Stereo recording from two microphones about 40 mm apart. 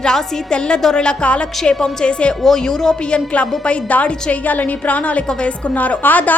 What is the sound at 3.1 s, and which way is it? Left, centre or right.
A woman's voice, left.